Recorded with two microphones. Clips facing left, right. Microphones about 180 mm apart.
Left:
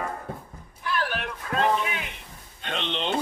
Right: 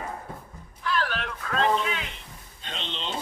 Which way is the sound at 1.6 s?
55° left (ahead or behind).